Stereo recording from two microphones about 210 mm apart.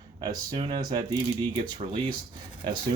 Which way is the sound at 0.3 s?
25° right (ahead or behind).